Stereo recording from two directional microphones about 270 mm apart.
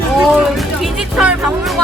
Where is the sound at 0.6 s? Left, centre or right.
Centre.